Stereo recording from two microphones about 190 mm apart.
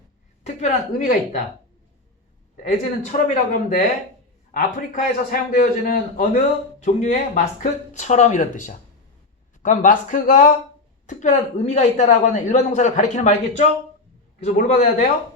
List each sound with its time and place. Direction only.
0.4 s a man's voice: 40° left (ahead or behind)
2.6 s a man's voice: 35° left (ahead or behind)
14.4 s a man's voice: 40° left (ahead or behind)